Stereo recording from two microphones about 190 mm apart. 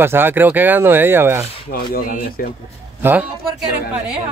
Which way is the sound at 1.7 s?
50° left (ahead or behind).